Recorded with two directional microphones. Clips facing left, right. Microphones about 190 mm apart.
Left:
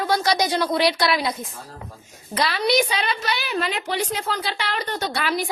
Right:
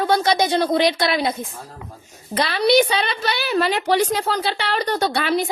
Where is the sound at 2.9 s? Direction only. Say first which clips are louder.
Right 3 dB; 30° right (ahead or behind).